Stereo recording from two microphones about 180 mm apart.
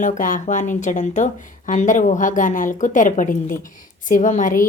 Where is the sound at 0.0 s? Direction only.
45° left (ahead or behind).